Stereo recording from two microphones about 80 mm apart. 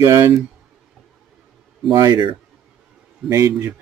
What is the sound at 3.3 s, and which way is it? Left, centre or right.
Speech, right.